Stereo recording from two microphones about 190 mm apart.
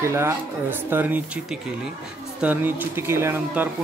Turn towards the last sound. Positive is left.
turn(degrees=-10)  # may be behind; listen again after turning